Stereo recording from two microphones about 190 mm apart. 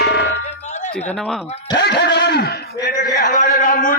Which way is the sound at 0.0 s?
60° left (ahead or behind).